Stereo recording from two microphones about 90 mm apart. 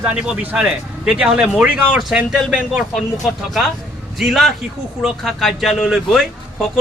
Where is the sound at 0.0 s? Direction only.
10° right (ahead or behind).